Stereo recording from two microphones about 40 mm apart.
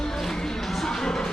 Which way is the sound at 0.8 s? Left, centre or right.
Centre.